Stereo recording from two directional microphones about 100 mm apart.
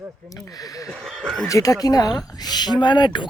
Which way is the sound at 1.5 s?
35° left (ahead or behind).